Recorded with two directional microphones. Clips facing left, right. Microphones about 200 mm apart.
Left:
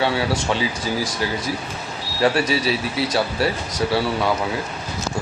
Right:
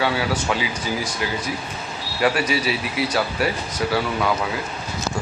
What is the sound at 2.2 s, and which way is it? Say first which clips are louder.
Speech: left 2 dB; 30° left (ahead or behind).